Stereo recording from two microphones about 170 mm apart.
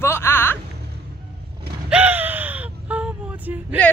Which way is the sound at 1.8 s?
10° right (ahead or behind).